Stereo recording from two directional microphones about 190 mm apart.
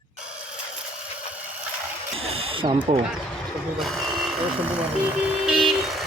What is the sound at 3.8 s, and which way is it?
Speech, centre (ahead or behind).